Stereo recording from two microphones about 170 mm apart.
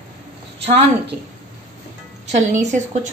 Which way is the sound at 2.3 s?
45° right (ahead or behind).